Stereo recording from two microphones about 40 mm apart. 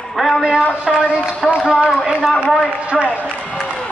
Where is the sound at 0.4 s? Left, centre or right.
Centre.